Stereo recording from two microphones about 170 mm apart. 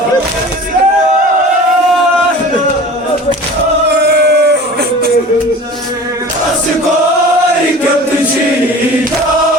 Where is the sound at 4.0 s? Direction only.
75° right (ahead or behind).